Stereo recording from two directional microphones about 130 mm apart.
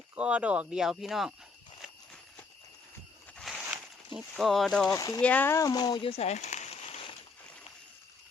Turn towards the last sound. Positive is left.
turn(degrees=50)  # may be behind; listen again after turning